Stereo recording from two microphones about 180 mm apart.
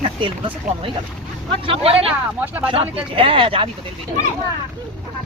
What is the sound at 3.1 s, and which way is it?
Speech, 30° right (ahead or behind).